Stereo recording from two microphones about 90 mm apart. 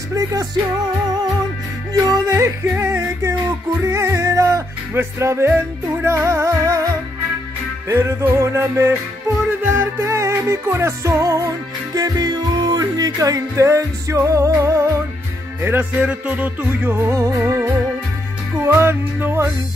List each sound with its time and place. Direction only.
0.1 s music: 40° right (ahead or behind)
2.2 s music: 35° right (ahead or behind)
16.0 s music: 15° right (ahead or behind); by 17.6 s 30° right (ahead or behind)
18.7 s music: 25° right (ahead or behind)